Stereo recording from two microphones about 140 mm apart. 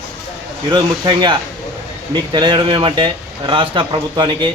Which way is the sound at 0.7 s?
30° right (ahead or behind).